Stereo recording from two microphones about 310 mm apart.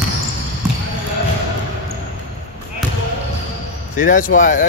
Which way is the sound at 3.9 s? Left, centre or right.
Left.